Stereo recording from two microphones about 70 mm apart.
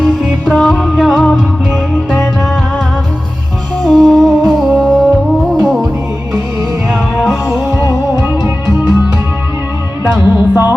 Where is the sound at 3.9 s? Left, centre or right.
Centre.